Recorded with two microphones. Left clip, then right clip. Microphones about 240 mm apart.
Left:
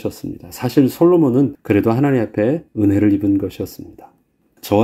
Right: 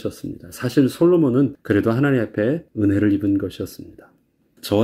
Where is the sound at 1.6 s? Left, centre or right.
Left.